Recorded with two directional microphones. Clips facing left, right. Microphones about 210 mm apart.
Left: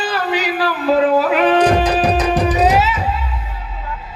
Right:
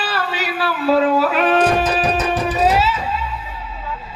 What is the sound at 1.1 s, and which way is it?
Music, 15° left (ahead or behind).